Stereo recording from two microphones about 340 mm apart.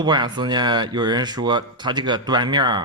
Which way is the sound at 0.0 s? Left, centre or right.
Centre.